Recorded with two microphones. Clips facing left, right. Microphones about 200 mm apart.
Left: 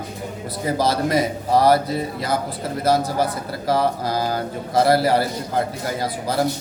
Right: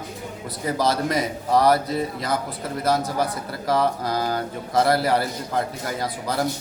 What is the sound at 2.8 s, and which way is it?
A man's voice, 30° left (ahead or behind).